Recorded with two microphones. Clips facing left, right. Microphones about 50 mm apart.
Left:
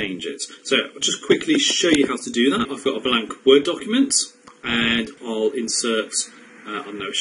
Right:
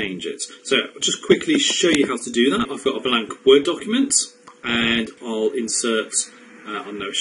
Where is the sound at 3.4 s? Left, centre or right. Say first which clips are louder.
Right 1 dB; centre.